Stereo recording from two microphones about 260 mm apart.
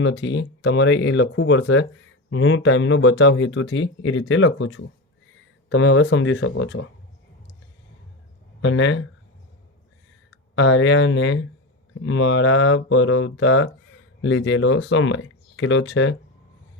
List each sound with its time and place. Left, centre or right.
0.0 s speech: left
8.6 s speech: left
10.5 s speech: left